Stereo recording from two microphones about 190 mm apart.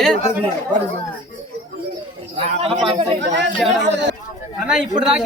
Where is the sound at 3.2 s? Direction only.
65° right (ahead or behind).